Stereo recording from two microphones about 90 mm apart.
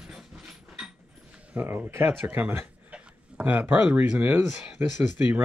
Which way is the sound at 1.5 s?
25° right (ahead or behind).